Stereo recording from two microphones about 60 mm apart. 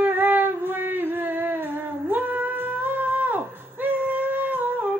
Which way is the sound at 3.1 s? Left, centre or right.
Right.